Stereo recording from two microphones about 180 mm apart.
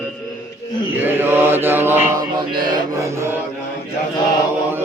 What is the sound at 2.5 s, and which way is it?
Music, 25° right (ahead or behind).